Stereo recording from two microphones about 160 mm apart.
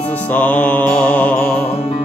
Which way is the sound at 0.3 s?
10° left (ahead or behind).